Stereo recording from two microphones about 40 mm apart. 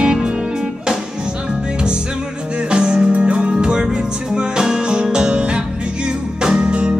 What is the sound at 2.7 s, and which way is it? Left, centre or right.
Music, right.